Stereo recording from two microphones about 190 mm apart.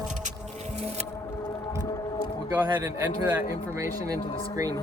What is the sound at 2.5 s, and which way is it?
Speech, 10° right (ahead or behind).